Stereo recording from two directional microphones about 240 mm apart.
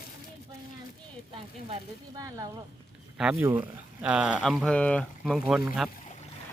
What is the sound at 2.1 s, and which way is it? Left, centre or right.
Speech, centre.